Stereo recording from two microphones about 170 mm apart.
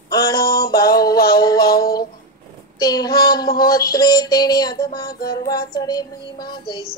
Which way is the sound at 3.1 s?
65° left (ahead or behind).